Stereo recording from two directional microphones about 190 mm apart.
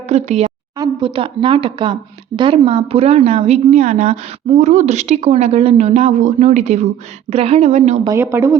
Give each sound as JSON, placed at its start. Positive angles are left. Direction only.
{"t": 0.1, "sound": "a woman's voice", "side_deg": -35}
{"t": 0.8, "sound": "speech", "side_deg": -25}
{"t": 8.0, "sound": "speech", "side_deg": -15}